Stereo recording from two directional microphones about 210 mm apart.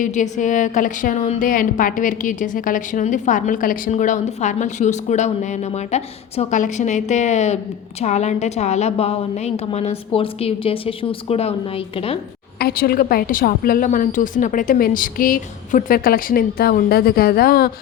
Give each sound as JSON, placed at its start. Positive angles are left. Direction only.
{"t": 0.0, "sound": "a woman's voice", "side_deg": 35}
{"t": 12.5, "sound": "a woman's voice", "side_deg": 45}